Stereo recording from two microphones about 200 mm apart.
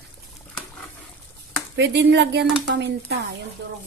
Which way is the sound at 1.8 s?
60° right (ahead or behind).